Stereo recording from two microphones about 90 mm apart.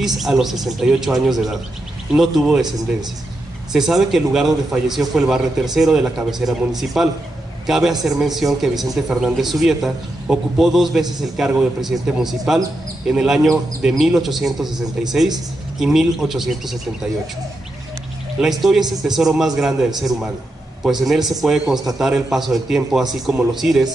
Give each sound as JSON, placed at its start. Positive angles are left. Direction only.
{"t": 0.0, "sound": "a man's voice", "side_deg": -5}
{"t": 3.7, "sound": "a man's voice", "side_deg": -5}
{"t": 18.4, "sound": "a man's voice", "side_deg": -5}
{"t": 20.8, "sound": "a man's voice", "side_deg": -5}